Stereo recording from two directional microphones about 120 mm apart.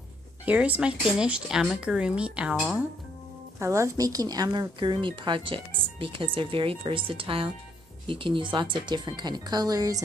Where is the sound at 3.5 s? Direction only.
25° right (ahead or behind).